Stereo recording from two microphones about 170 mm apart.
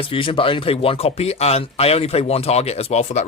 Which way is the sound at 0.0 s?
30° left (ahead or behind).